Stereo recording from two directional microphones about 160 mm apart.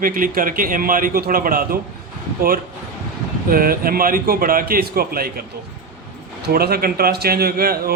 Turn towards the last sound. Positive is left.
turn(degrees=-70)  # may be behind; listen again after turning